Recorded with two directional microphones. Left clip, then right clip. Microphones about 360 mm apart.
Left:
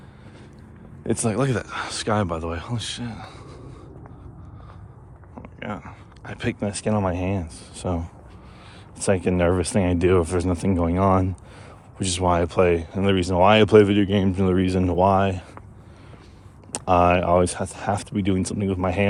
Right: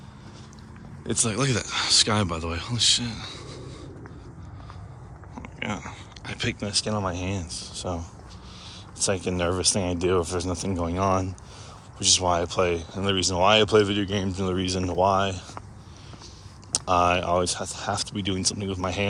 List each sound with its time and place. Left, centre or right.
1.0 s speech: centre
5.4 s speech: centre; by 15.4 s left
16.7 s speech: left